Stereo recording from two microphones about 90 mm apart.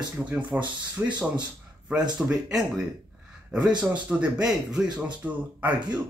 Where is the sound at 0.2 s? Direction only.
15° right (ahead or behind).